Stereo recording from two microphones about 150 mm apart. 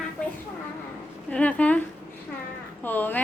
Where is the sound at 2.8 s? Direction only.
10° left (ahead or behind).